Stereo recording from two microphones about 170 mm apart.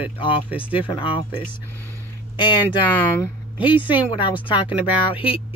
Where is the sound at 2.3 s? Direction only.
30° left (ahead or behind).